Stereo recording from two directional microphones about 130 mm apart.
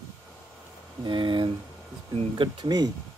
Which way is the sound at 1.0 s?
35° right (ahead or behind).